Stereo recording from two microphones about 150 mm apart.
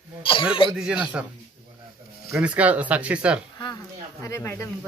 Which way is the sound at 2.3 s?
10° right (ahead or behind).